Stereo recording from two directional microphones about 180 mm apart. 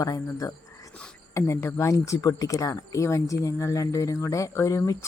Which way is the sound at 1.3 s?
15° left (ahead or behind).